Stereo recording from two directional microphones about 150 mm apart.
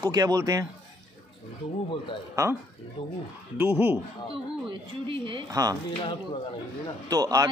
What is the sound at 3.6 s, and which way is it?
Speech, 15° right (ahead or behind).